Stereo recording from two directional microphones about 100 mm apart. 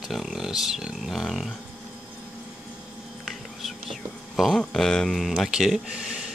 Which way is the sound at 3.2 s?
Centre (ahead or behind).